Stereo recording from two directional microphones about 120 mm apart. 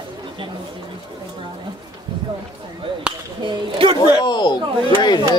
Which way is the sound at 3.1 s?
10° right (ahead or behind).